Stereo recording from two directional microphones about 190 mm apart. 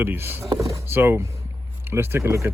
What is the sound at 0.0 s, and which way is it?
Speech, 10° right (ahead or behind).